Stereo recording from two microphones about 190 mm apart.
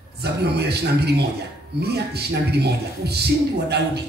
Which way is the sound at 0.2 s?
60° right (ahead or behind).